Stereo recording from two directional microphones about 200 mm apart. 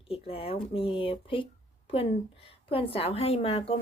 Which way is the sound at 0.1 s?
30° left (ahead or behind).